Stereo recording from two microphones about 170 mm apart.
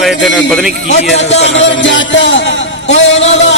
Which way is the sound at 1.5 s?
90° left.